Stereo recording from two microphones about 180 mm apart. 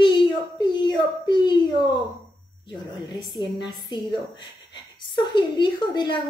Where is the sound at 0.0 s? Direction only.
25° left (ahead or behind).